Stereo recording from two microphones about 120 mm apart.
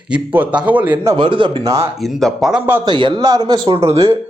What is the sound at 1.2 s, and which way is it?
Speech, 45° right (ahead or behind).